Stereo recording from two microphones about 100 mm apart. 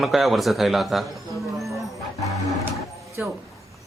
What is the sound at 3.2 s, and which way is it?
Speech, 20° right (ahead or behind).